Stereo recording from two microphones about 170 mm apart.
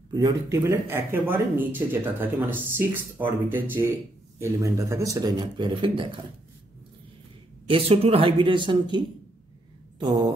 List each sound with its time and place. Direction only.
0.1 s speech: 20° right (ahead or behind)
7.7 s speech: 35° right (ahead or behind)
9.9 s a sound: 25° right (ahead or behind)